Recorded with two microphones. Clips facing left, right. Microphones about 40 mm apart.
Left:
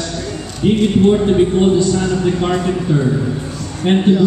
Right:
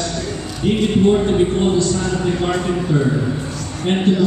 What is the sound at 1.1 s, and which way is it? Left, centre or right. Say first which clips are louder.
A man's voice: left 2 dB; centre.